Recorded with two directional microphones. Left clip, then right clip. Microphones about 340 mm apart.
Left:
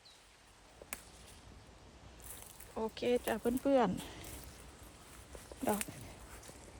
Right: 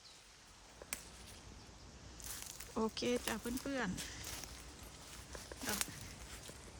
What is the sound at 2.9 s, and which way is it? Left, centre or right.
Speech, centre.